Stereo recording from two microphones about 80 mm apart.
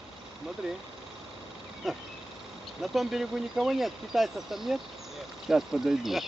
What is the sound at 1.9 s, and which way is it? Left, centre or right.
Speech, centre.